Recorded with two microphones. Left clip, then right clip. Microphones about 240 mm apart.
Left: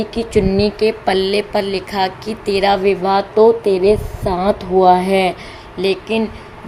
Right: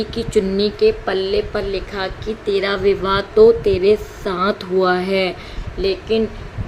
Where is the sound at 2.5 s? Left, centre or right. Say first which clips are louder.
Left 4 dB; centre.